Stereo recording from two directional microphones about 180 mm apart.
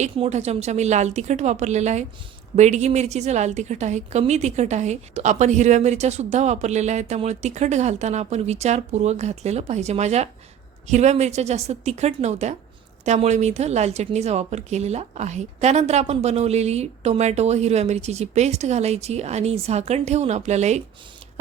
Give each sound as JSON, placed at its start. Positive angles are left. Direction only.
{"t": 0.0, "sound": "a woman's voice", "side_deg": -40}